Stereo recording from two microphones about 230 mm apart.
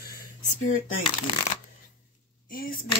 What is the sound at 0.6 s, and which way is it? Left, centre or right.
Speech, left.